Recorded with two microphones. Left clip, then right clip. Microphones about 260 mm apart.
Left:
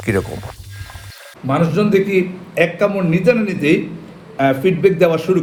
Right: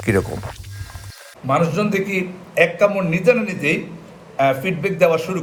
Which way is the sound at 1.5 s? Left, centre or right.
Left.